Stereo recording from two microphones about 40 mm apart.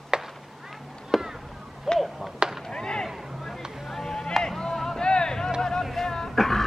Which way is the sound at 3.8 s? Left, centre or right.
Centre.